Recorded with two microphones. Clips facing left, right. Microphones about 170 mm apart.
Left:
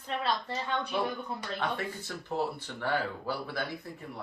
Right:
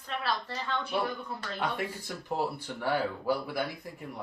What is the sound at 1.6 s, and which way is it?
Speech, 10° right (ahead or behind).